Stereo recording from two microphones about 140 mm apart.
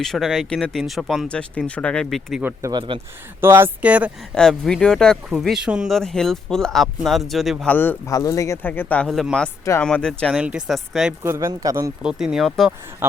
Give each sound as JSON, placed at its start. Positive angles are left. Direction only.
{"t": 0.0, "sound": "speech", "side_deg": 0}
{"t": 2.4, "sound": "speech", "side_deg": -15}
{"t": 2.7, "sound": "speech", "side_deg": -35}
{"t": 3.4, "sound": "speech", "side_deg": -15}
{"t": 4.4, "sound": "speech", "side_deg": 5}
{"t": 7.7, "sound": "speech", "side_deg": 15}
{"t": 8.1, "sound": "speech", "side_deg": 25}
{"t": 8.6, "sound": "speech", "side_deg": 15}
{"t": 9.0, "sound": "speech", "side_deg": 0}
{"t": 11.2, "sound": "speech", "side_deg": -20}
{"t": 12.0, "sound": "speech", "side_deg": -5}
{"t": 13.0, "sound": "speech", "side_deg": -15}